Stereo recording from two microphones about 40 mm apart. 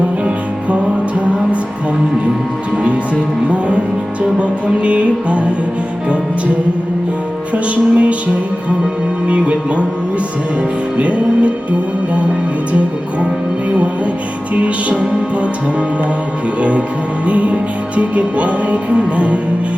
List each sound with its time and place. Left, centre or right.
3.5 s music: right
7.5 s music: right
9.2 s music: right
10.9 s music: right
13.7 s music: right
16.6 s music: right